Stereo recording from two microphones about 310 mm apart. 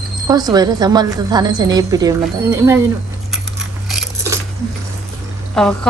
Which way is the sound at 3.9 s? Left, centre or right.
Centre.